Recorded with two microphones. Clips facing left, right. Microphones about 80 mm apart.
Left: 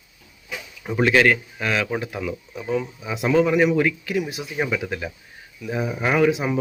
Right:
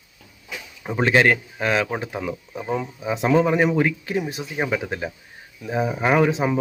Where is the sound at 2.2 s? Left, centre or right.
Right.